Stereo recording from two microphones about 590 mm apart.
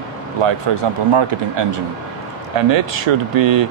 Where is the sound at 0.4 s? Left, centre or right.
Right.